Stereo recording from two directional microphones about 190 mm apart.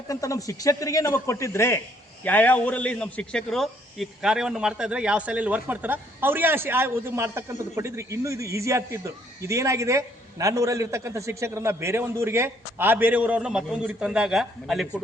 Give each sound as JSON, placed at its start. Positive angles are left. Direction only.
{"t": 0.1, "sound": "a man's voice", "side_deg": 15}